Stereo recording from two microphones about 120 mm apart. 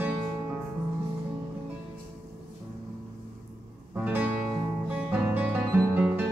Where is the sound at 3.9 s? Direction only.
10° right (ahead or behind).